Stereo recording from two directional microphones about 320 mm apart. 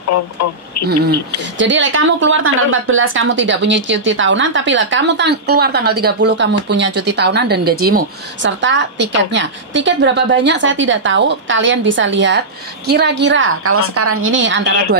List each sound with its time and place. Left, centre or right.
0.1 s speech: left
1.4 s a woman's voice: right